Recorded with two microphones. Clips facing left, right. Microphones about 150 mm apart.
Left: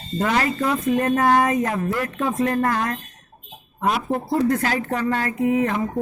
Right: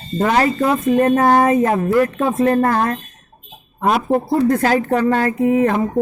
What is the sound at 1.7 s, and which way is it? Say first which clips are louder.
Speech: right 8 dB; 45° right (ahead or behind).